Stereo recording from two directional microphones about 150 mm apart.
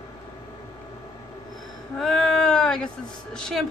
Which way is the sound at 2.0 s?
5° left (ahead or behind).